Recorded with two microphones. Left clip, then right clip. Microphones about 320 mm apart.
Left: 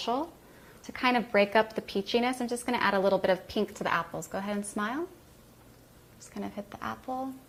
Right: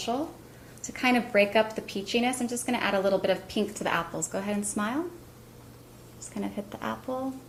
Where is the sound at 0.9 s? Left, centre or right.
Left.